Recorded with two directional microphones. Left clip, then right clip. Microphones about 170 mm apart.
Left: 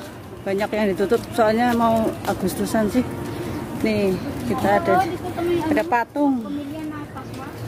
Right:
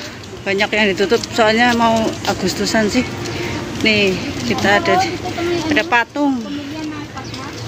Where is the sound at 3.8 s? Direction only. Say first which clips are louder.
Right 8 dB; 20° left (ahead or behind).